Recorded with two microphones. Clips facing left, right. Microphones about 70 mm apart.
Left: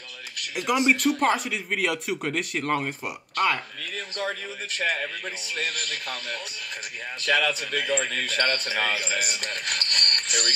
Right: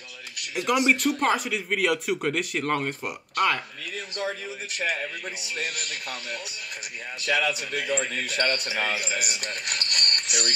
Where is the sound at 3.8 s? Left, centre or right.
Left.